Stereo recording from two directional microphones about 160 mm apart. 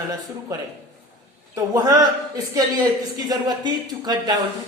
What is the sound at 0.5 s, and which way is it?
A man's voice, 20° right (ahead or behind).